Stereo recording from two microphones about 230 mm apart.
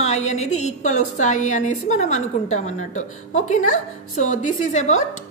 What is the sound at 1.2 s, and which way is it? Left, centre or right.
A woman's voice, left.